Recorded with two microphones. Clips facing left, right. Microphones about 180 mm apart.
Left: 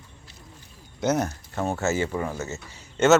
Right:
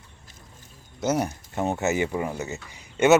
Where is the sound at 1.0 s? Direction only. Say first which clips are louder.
Left 1 dB; 10° right (ahead or behind).